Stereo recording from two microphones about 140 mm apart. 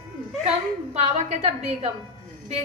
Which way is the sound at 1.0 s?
45° right (ahead or behind).